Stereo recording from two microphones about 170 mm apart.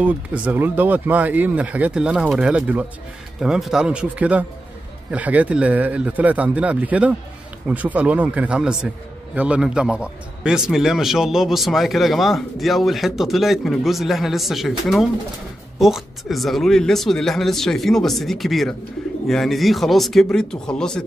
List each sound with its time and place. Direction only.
0.0 s a man's voice: 10° right (ahead or behind)